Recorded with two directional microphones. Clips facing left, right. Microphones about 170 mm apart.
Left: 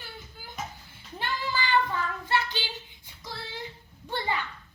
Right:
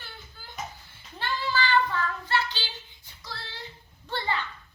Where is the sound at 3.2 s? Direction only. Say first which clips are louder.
Left 3 dB; 20° left (ahead or behind).